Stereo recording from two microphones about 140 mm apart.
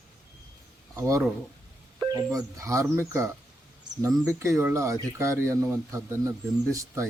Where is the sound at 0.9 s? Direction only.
20° right (ahead or behind).